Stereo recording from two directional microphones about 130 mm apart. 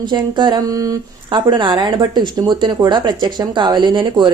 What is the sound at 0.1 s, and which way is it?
Speech, 35° right (ahead or behind).